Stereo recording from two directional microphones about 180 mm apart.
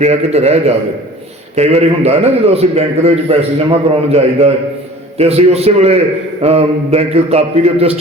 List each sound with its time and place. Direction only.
0.0 s a man's voice: 35° right (ahead or behind)